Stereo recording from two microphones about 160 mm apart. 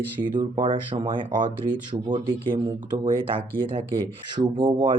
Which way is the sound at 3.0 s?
35° right (ahead or behind).